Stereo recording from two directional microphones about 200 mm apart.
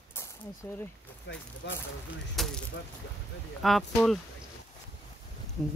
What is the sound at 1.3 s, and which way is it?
Speech, 65° left (ahead or behind).